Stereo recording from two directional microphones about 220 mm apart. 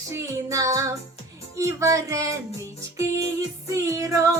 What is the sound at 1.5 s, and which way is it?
Speech, 15° right (ahead or behind).